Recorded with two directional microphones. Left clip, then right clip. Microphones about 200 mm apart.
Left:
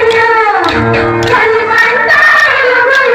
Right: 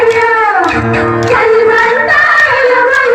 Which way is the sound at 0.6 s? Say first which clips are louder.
Left 1 dB; 25° left (ahead or behind).